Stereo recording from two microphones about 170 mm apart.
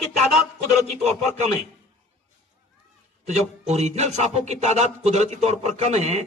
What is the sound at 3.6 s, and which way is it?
A man's voice, 40° right (ahead or behind).